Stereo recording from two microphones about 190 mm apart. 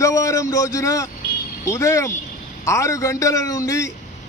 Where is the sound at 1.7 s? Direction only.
15° left (ahead or behind).